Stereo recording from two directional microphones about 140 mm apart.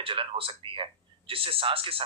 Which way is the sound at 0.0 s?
40° right (ahead or behind).